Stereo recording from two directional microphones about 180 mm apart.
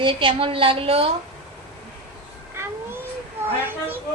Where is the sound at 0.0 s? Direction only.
25° right (ahead or behind).